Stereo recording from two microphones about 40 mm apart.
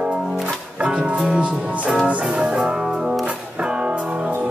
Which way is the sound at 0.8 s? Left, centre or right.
Right.